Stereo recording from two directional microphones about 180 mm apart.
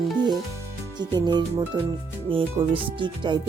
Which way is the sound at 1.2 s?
25° right (ahead or behind).